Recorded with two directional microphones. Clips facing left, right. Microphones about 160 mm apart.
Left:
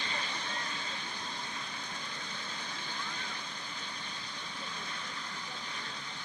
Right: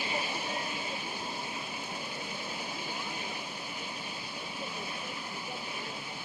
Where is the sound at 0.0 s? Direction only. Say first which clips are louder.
Right 5 dB; 10° right (ahead or behind).